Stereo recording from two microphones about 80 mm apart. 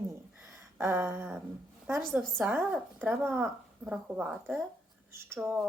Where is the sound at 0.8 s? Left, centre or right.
Right.